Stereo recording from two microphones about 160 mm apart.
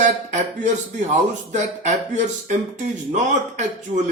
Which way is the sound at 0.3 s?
50° right (ahead or behind).